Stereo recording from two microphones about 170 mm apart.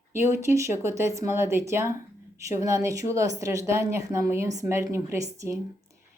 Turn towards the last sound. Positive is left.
turn(degrees=-20)  # may be behind; listen again after turning